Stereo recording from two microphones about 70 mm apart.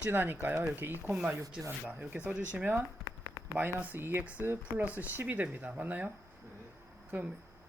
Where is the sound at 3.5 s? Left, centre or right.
Right.